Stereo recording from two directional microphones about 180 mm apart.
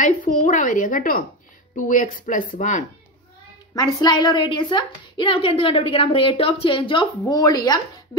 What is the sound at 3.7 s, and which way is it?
Speech, 25° left (ahead or behind).